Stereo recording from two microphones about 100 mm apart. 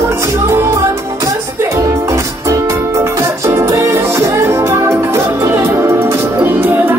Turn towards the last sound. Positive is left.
turn(degrees=-20)  # may be behind; listen again after turning